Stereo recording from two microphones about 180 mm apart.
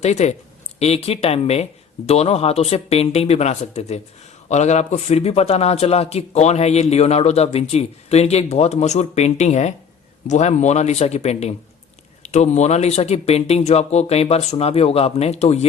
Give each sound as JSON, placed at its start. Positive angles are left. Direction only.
{"t": 0.0, "sound": "a man's voice", "side_deg": 40}